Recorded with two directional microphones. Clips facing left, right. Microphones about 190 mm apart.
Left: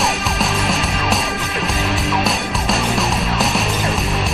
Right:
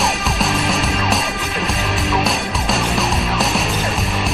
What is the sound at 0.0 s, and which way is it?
Music, centre (ahead or behind).